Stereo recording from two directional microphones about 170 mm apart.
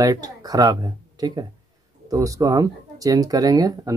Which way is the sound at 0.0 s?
20° right (ahead or behind).